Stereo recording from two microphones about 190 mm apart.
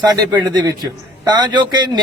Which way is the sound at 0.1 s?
20° right (ahead or behind).